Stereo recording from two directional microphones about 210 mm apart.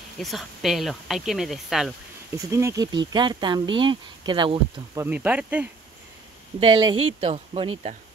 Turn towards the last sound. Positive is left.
turn(degrees=-25)  # may be behind; listen again after turning